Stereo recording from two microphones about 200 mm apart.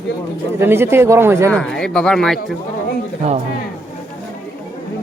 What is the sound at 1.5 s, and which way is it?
Speech, 5° left (ahead or behind).